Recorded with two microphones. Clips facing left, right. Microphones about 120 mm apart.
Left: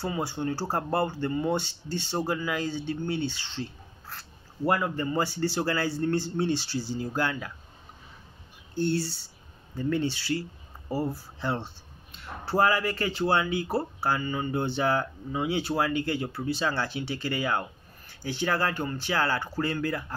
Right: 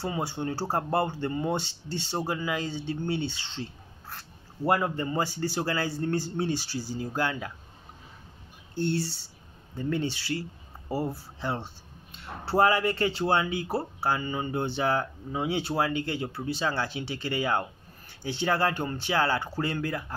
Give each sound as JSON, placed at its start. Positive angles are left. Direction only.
{"t": 0.0, "sound": "speech", "side_deg": -20}
{"t": 4.6, "sound": "a man's voice", "side_deg": -25}
{"t": 8.7, "sound": "a man's voice", "side_deg": -20}
{"t": 12.4, "sound": "speech", "side_deg": -25}